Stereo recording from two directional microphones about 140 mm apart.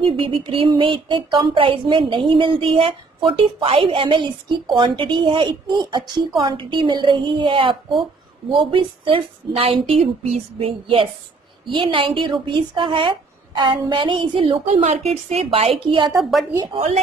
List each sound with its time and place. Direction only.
0.0 s a sound: 35° right (ahead or behind)
14.7 s a woman's voice: 55° right (ahead or behind); by 16.1 s 40° right (ahead or behind)
16.2 s speech: centre (ahead or behind)